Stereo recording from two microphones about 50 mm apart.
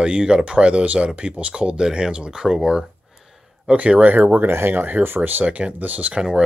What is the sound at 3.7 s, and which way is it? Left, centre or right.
Speech, right.